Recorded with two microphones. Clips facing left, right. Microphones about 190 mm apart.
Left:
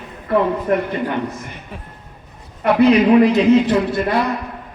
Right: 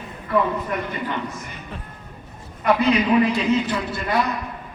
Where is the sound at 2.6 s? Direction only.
65° left (ahead or behind).